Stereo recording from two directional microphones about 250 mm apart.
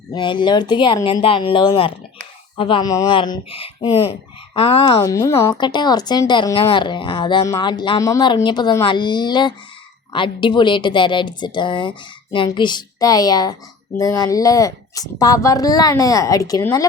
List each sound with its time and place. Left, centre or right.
0.1 s a woman's voice: centre